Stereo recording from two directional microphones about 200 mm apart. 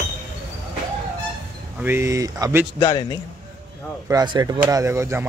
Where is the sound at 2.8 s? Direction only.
20° left (ahead or behind).